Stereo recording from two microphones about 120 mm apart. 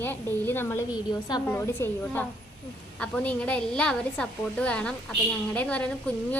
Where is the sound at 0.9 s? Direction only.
35° left (ahead or behind).